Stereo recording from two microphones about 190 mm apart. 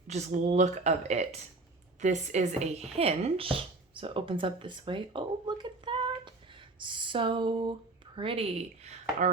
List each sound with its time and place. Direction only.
0.1 s speech: 40° right (ahead or behind)